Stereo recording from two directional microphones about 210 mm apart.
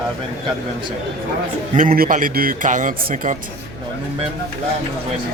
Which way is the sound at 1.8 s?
40° right (ahead or behind).